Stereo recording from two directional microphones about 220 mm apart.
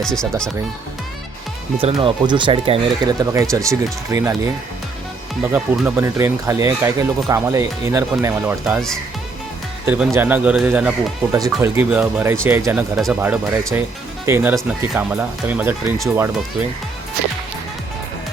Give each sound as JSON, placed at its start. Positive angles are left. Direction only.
{"t": 0.0, "sound": "speech", "side_deg": 5}
{"t": 1.8, "sound": "speech", "side_deg": -25}
{"t": 5.4, "sound": "speech", "side_deg": -10}
{"t": 9.8, "sound": "speech", "side_deg": -10}
{"t": 13.2, "sound": "speech", "side_deg": -10}